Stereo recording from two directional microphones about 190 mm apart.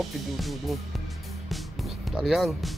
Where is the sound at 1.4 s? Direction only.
Centre (ahead or behind).